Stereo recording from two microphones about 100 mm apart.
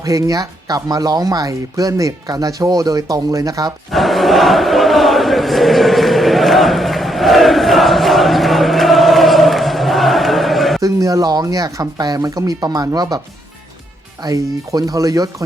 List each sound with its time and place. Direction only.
0.0 s speech: 35° right (ahead or behind)
3.9 s chant: centre (ahead or behind)
10.8 s speech: 35° right (ahead or behind)
14.3 s speech: 35° right (ahead or behind)